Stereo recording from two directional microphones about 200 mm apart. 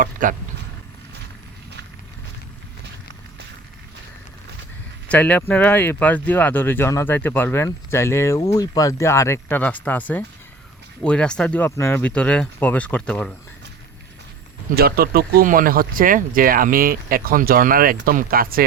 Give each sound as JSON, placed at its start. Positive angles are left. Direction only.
{"t": 0.0, "sound": "speech", "side_deg": -40}
{"t": 5.0, "sound": "speech", "side_deg": 5}
{"t": 14.8, "sound": "speech", "side_deg": -50}